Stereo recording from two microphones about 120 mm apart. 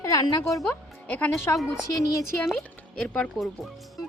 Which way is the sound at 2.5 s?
5° left (ahead or behind).